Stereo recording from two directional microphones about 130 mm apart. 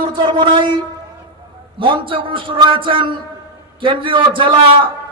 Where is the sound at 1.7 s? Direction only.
40° right (ahead or behind).